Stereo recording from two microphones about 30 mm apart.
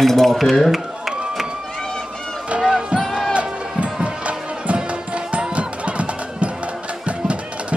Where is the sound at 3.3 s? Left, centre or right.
Right.